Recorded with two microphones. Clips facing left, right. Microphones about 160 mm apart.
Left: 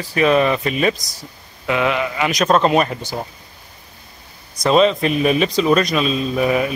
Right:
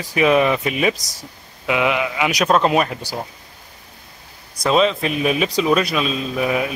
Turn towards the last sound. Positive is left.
turn(degrees=0)  # may be behind; listen again after turning